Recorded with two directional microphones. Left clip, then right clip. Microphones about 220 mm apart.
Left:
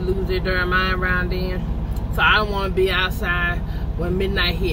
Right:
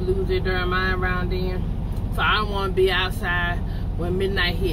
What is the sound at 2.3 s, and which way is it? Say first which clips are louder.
Speech: left 2 dB; 10° left (ahead or behind).